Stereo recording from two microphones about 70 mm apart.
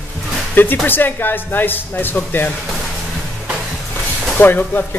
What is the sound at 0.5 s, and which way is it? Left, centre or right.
Speech, left.